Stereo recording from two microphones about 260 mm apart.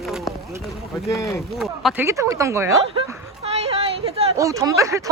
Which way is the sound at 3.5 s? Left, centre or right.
Right.